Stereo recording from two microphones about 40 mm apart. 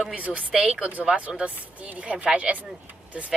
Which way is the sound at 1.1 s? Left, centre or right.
Right.